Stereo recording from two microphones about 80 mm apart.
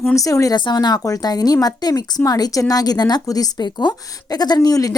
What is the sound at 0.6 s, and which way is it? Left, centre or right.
A woman's voice, left.